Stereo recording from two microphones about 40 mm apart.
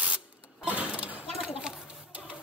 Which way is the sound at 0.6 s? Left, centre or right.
Right.